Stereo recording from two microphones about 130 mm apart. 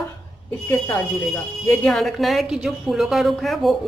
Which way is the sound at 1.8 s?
5° left (ahead or behind).